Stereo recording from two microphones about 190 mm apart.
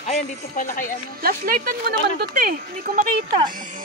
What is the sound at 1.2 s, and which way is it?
Speech, 50° right (ahead or behind).